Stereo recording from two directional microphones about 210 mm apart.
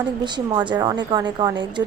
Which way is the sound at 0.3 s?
20° right (ahead or behind).